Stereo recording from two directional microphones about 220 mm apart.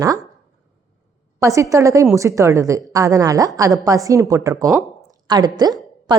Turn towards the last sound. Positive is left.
turn(degrees=-20)  # may be behind; listen again after turning